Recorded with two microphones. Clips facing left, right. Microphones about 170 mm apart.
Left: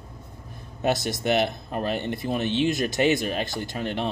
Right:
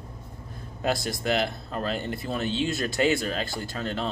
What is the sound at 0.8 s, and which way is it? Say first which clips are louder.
Speech: left 3 dB; 20° left (ahead or behind).